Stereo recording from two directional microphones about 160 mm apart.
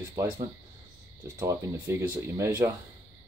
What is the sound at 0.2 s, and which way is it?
Speech, 20° right (ahead or behind).